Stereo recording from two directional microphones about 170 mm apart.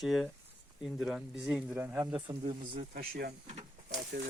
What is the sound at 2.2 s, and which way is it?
Speech, 30° right (ahead or behind).